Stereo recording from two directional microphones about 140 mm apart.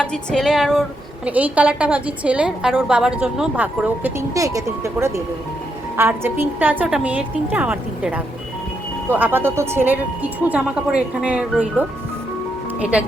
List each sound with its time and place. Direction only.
0.0 s music: 5° left (ahead or behind)
1.2 s a woman's voice: 10° right (ahead or behind)
4.4 s a woman's voice: 25° right (ahead or behind)